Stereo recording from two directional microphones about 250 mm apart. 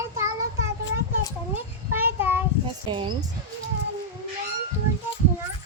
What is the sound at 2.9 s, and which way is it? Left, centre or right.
Speech, centre.